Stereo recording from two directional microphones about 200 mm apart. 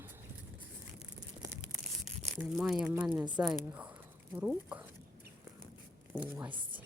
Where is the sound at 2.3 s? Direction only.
5° right (ahead or behind).